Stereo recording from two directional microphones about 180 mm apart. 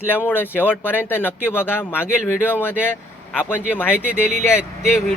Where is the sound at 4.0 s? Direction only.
5° right (ahead or behind).